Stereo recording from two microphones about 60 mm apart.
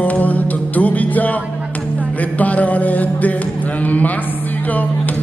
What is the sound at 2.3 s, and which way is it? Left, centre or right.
Music, left.